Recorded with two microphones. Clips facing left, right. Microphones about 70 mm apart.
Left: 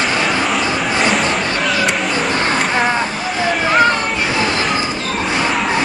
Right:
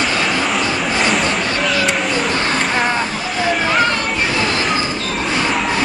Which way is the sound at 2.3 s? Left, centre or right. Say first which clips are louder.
Left 1 dB; centre.